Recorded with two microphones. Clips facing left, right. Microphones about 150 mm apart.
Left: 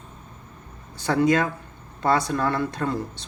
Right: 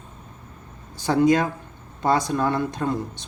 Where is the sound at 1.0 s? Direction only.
20° right (ahead or behind).